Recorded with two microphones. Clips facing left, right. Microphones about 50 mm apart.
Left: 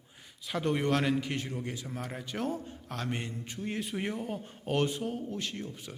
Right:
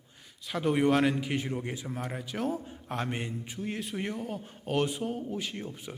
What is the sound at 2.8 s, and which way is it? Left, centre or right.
Speech, right.